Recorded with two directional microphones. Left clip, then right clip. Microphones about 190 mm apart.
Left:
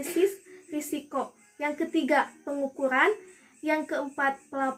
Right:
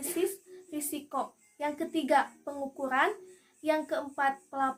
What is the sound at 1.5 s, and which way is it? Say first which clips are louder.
Speech: left 4 dB; 25° right (ahead or behind).